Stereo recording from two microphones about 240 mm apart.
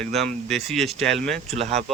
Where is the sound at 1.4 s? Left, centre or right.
Right.